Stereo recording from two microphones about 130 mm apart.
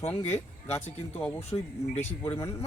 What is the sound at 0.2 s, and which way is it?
Speech, 55° left (ahead or behind).